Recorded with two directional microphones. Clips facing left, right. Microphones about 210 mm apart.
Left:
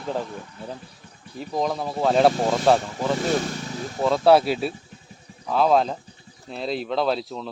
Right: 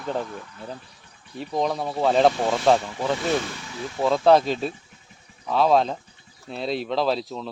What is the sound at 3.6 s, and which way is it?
Vehicle, 40° left (ahead or behind).